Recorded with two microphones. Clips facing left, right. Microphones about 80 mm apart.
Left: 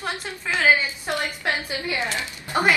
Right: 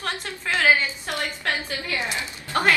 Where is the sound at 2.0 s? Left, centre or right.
Right.